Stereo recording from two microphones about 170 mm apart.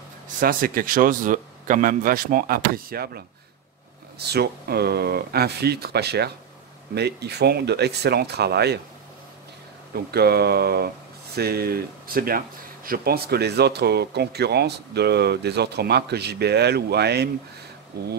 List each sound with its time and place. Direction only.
0.4 s a man's voice: 55° right (ahead or behind); by 8.7 s 75° right (ahead or behind)
10.1 s speech: 70° right (ahead or behind)